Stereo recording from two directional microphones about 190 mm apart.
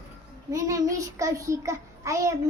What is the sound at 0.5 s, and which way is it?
A child's voice, 15° right (ahead or behind).